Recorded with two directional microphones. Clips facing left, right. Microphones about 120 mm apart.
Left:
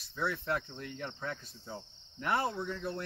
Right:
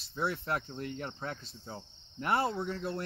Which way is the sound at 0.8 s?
40° right (ahead or behind).